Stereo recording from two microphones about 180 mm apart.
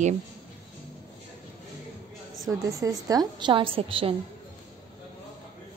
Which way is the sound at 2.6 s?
20° right (ahead or behind).